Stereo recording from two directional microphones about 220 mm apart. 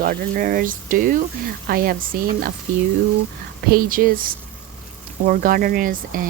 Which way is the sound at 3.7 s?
40° right (ahead or behind).